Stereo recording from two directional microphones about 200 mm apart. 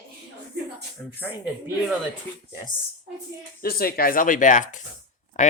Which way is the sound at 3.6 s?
50° left (ahead or behind).